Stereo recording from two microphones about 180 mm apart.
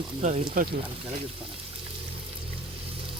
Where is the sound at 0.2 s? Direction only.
40° right (ahead or behind).